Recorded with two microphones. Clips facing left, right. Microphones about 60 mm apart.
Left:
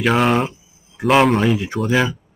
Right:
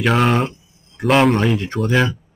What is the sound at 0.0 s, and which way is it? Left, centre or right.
Speech, centre.